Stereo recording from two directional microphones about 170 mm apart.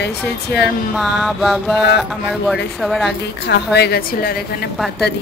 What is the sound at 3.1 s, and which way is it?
A woman's voice, 80° left.